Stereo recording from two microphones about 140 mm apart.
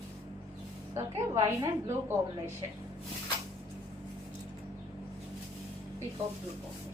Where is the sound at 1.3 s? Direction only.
20° right (ahead or behind).